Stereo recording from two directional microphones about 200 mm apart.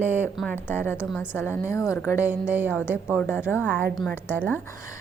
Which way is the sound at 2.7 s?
10° left (ahead or behind).